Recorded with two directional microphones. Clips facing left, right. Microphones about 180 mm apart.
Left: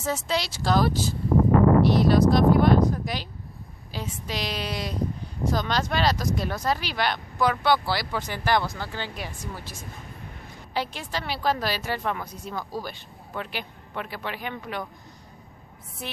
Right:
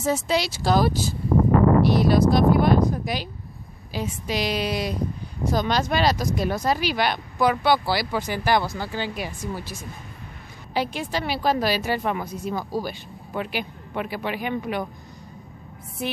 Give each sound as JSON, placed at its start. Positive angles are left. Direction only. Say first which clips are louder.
{"t": 0.0, "sound": "speech", "louder": "right 4 dB", "side_deg": -10}